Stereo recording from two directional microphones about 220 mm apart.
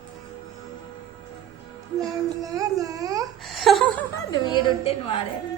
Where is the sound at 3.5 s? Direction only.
Centre (ahead or behind).